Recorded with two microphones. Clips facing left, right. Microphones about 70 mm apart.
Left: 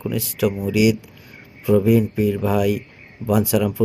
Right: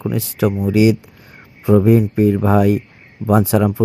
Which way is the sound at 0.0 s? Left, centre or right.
Right.